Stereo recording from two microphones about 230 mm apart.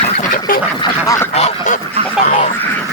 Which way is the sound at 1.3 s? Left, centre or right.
Left.